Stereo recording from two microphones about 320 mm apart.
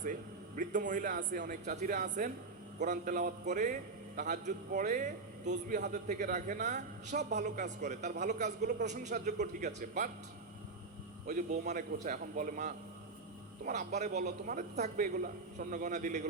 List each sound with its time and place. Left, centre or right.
0.0 s a man's voice: right
11.3 s a man's voice: right